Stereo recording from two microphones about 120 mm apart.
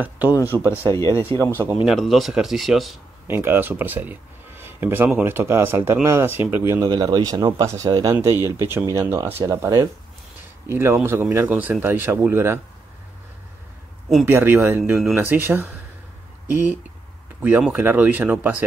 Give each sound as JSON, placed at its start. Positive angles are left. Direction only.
{"t": 0.5, "sound": "speech", "side_deg": -15}
{"t": 0.9, "sound": "speech", "side_deg": 25}
{"t": 1.4, "sound": "speech", "side_deg": -20}
{"t": 1.9, "sound": "speech", "side_deg": 0}
{"t": 3.3, "sound": "speech", "side_deg": -20}
{"t": 6.9, "sound": "speech", "side_deg": -35}
{"t": 14.2, "sound": "speech", "side_deg": -15}